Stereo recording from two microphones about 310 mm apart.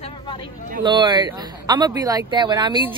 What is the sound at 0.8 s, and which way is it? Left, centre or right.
A man's voice, centre.